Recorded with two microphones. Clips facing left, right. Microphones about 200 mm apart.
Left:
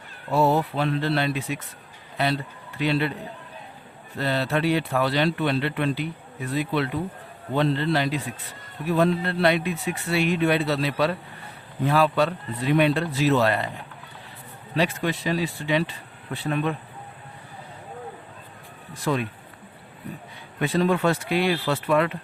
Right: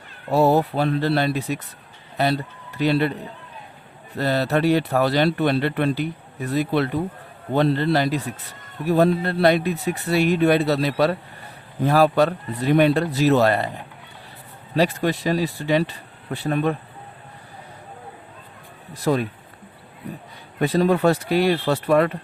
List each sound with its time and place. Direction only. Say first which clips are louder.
0.3 s a man's voice: right 4 dB; 40° right (ahead or behind)
4.2 s speech: right 4 dB; 40° right (ahead or behind)
14.8 s speech: right 4 dB; 40° right (ahead or behind)
18.9 s speech: right 4 dB; 40° right (ahead or behind)
20.6 s speech: right 4 dB; 40° right (ahead or behind)